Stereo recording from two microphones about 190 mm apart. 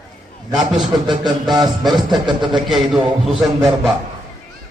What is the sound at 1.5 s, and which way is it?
Speech, 20° right (ahead or behind).